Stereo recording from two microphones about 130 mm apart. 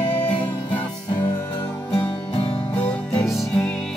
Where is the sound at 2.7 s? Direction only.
10° left (ahead or behind).